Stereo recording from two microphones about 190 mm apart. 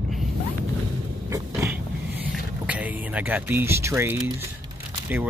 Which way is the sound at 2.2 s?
10° right (ahead or behind).